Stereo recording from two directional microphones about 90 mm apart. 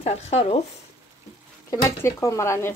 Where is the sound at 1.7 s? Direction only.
35° left (ahead or behind).